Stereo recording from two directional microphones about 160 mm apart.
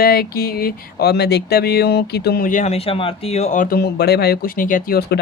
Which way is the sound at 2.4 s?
45° left (ahead or behind).